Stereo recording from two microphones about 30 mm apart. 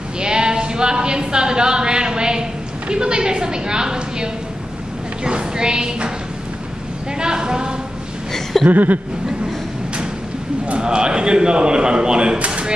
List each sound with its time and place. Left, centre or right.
0.2 s sheep: right
2.9 s speech: right
7.2 s speech: right
8.6 s speech: right
10.8 s speech: right
12.4 s a sound: right